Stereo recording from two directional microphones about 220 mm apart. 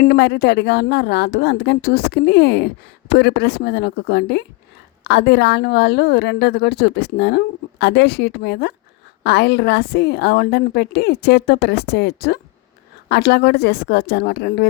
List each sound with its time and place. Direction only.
0.0 s speech: 50° left (ahead or behind)